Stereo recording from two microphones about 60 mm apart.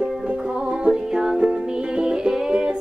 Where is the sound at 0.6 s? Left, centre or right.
Centre.